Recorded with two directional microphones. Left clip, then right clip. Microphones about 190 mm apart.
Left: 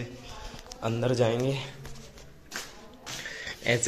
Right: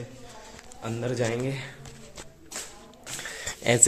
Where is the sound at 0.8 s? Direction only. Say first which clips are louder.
Left 3 dB; 15° left (ahead or behind).